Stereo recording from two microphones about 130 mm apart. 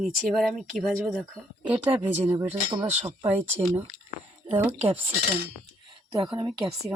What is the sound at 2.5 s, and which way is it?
Speech, 45° right (ahead or behind).